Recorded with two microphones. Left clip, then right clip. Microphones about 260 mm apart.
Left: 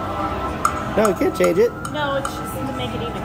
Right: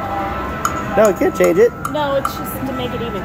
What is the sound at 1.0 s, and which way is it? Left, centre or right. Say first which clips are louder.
Speech: right 5 dB; centre.